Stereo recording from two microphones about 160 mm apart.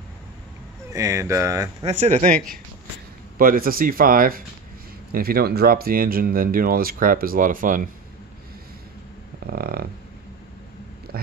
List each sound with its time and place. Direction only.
0.8 s speech: 20° right (ahead or behind)
1.9 s speech: 45° right (ahead or behind); by 4.4 s 60° right (ahead or behind)
5.1 s speech: 70° right (ahead or behind); by 7.9 s 55° right (ahead or behind)
9.5 s a sound: 70° right (ahead or behind)